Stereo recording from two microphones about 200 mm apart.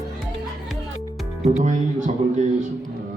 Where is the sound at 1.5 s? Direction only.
35° right (ahead or behind).